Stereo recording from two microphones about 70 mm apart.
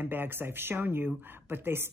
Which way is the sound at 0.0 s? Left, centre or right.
Right.